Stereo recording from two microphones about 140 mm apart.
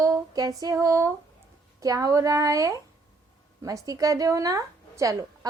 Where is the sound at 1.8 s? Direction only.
25° right (ahead or behind).